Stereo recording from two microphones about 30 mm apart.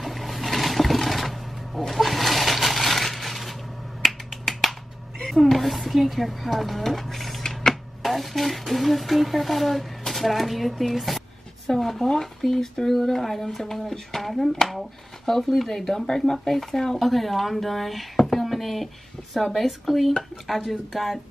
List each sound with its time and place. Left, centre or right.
0.0 s a sound: centre
4.0 s finger snapping: centre
5.3 s speech: centre
12.0 s speech: centre